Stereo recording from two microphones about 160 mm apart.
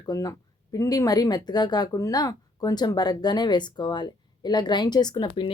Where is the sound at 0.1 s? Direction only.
25° left (ahead or behind).